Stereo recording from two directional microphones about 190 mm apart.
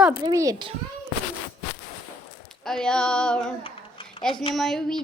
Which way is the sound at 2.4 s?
Centre (ahead or behind).